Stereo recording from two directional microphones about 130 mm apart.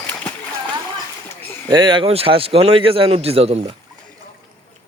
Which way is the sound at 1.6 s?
35° right (ahead or behind).